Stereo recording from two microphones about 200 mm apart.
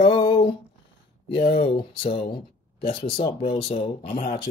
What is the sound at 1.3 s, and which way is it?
Speech, 50° left (ahead or behind).